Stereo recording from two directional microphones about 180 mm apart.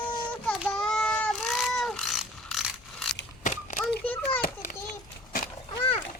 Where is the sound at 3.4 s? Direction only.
45° left (ahead or behind).